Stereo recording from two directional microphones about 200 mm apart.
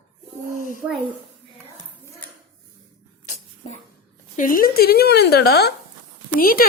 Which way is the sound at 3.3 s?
35° left (ahead or behind).